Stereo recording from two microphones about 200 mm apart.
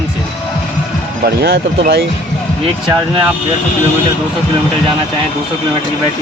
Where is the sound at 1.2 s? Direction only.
50° right (ahead or behind).